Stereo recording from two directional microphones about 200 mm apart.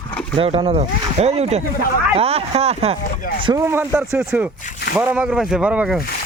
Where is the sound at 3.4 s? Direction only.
15° right (ahead or behind).